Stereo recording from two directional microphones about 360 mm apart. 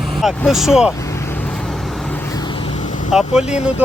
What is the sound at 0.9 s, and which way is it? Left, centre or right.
Vehicle, centre.